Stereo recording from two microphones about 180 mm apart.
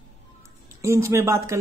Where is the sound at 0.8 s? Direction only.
15° right (ahead or behind).